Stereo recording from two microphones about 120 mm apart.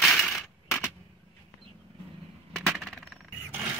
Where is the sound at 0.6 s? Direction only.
15° left (ahead or behind).